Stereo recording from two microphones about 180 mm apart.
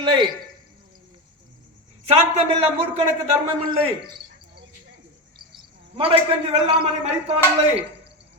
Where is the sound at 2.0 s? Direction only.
35° right (ahead or behind).